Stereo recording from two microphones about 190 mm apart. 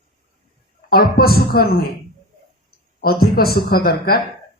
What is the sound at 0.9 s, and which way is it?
Speech, 50° left (ahead or behind).